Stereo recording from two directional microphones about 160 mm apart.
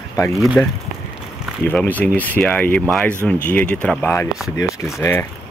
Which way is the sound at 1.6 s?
10° left (ahead or behind).